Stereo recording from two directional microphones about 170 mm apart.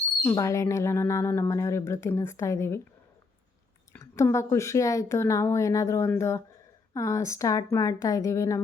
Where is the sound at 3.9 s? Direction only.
15° left (ahead or behind).